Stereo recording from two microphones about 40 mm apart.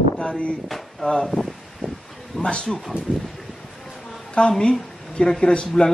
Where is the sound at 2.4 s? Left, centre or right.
Centre.